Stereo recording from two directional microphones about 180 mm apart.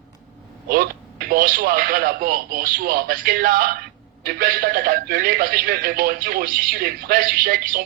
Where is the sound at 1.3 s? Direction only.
55° right (ahead or behind).